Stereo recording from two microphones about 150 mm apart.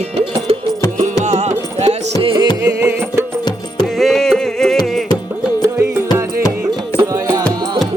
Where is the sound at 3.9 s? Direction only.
Centre (ahead or behind).